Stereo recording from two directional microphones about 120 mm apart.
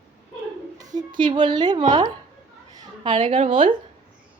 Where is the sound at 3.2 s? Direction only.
55° right (ahead or behind).